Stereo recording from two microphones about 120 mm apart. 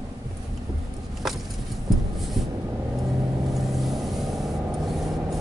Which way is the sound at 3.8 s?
Centre (ahead or behind).